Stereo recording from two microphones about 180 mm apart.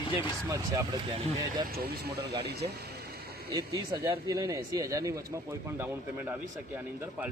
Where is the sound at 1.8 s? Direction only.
60° right (ahead or behind).